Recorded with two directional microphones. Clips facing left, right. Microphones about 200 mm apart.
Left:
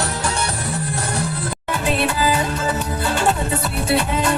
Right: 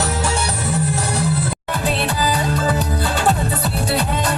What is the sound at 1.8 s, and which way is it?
Music, 35° right (ahead or behind).